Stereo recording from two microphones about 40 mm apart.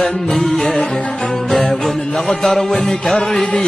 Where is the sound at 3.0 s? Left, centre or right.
Centre.